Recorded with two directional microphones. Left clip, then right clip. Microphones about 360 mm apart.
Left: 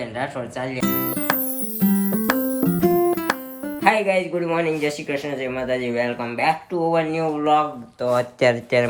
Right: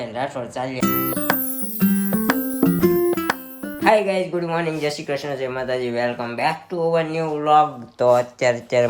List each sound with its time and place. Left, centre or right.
0.2 s speech: centre
1.8 s music: centre
3.8 s speech: centre